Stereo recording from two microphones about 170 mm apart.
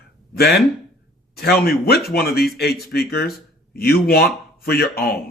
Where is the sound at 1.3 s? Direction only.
65° left (ahead or behind).